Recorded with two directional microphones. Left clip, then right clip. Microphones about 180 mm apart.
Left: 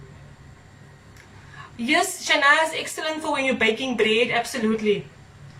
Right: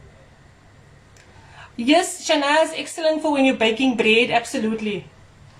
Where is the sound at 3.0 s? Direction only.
15° right (ahead or behind).